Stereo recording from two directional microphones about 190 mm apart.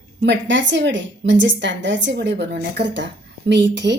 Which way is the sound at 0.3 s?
70° right (ahead or behind).